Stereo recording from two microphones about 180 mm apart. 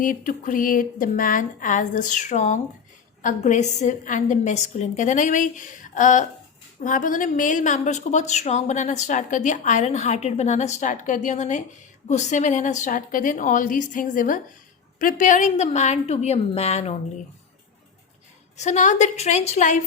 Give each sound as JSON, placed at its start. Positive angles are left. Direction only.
{"t": 0.0, "sound": "a woman's voice", "side_deg": 50}
{"t": 18.5, "sound": "a woman's voice", "side_deg": 40}